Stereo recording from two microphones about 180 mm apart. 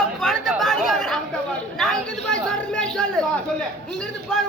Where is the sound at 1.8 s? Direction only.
5° left (ahead or behind).